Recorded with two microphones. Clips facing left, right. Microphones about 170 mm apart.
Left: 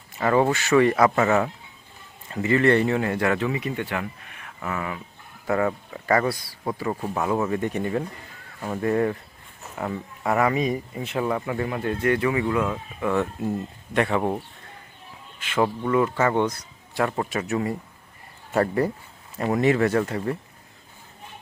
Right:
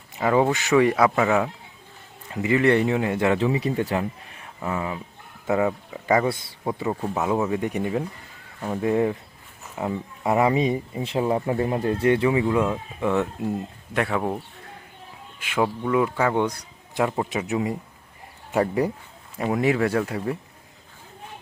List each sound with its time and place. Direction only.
0.2 s speech: 10° right (ahead or behind)
6.8 s speech: 5° right (ahead or behind)
13.9 s speech: centre (ahead or behind)
15.4 s speech: 10° right (ahead or behind)